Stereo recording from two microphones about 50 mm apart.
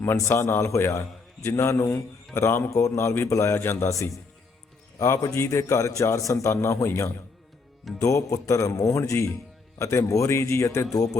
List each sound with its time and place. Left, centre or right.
0.0 s a man's voice: left
1.5 s a man's voice: left
1.9 s a man's voice: left
2.6 s a man's voice: left
3.8 s speech: left
4.9 s a man's voice: left
8.0 s speech: left
9.7 s a man's voice: left